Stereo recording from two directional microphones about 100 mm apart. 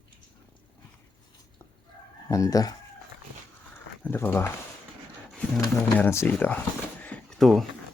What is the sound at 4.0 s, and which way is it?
Speech, 20° left (ahead or behind).